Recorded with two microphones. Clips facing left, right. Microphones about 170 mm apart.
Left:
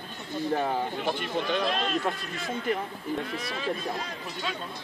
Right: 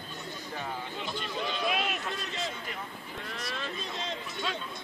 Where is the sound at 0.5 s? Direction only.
55° left (ahead or behind).